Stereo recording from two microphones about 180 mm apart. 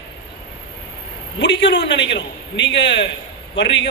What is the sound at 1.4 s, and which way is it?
A man's voice, 80° left.